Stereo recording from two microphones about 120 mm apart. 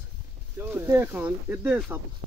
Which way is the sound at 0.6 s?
20° right (ahead or behind).